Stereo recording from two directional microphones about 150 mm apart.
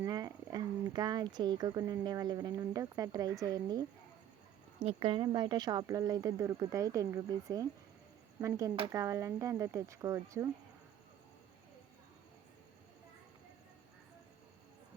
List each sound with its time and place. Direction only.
0.0 s speech: 25° right (ahead or behind)
4.8 s speech: 40° right (ahead or behind); by 10.5 s 20° right (ahead or behind)